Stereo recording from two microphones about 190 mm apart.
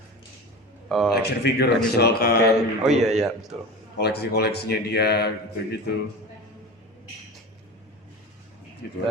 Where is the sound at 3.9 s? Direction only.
60° left (ahead or behind).